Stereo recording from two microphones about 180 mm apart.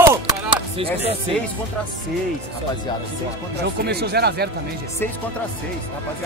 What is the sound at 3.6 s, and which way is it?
Speech, 65° right (ahead or behind).